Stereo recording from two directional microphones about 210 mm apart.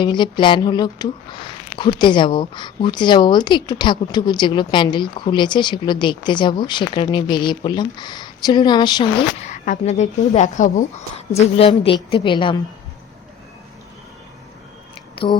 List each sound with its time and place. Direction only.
0.0 s a woman's voice: 20° left (ahead or behind)
9.4 s a woman's voice: 35° left (ahead or behind)
15.1 s a sound: 25° left (ahead or behind)